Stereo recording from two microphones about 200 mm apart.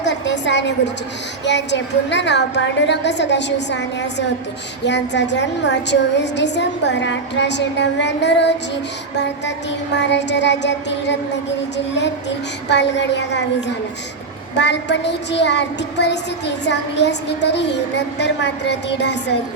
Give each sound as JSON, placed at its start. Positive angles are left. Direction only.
{"t": 0.0, "sound": "a sound", "side_deg": 60}
{"t": 1.5, "sound": "a woman's voice", "side_deg": 60}
{"t": 12.6, "sound": "a woman's voice", "side_deg": 60}